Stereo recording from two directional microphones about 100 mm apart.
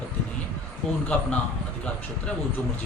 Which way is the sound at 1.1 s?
10° left (ahead or behind).